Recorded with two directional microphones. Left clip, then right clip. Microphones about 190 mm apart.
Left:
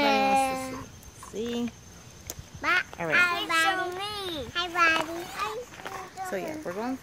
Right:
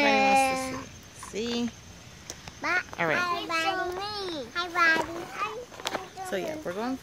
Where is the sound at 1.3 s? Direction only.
15° right (ahead or behind).